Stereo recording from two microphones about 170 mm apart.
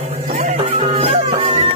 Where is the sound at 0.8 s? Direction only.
35° right (ahead or behind).